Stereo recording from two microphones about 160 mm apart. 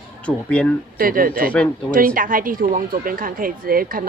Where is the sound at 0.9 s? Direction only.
65° right (ahead or behind).